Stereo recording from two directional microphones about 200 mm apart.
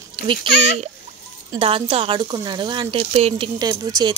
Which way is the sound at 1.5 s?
25° right (ahead or behind).